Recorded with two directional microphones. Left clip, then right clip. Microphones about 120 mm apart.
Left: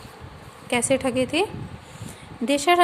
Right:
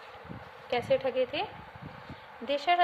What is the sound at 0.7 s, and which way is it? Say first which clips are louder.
A woman's voice: left 6 dB; 30° left (ahead or behind).